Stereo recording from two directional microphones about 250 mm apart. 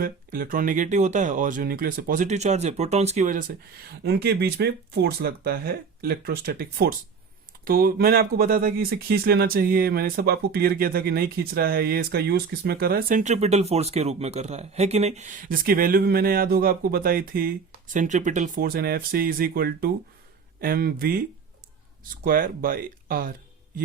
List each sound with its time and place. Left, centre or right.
0.0 s speech: right